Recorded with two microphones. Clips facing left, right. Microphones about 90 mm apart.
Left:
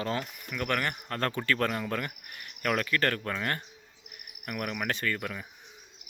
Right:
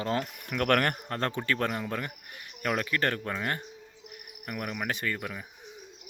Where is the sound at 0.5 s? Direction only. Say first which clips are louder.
Right 5 dB; 60° right (ahead or behind).